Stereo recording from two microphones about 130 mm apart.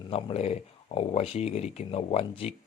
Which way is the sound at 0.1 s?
50° left (ahead or behind).